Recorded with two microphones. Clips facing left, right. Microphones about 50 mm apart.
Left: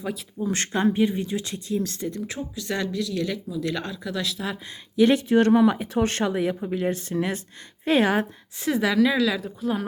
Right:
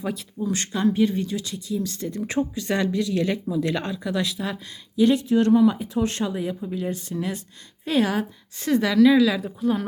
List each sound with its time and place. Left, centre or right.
0.0 s speech: centre
0.5 s speech: left
0.9 s speech: centre
1.4 s speech: left
2.3 s speech: right; by 4.5 s centre
5.1 s speech: left
8.6 s speech: centre
9.1 s speech: centre